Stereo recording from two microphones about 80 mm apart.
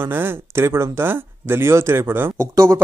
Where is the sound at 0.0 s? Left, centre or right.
Right.